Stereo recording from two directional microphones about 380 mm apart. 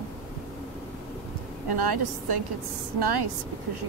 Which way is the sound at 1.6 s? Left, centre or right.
Right.